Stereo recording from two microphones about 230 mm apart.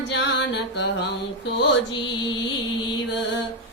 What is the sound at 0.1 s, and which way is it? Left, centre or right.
Music, left.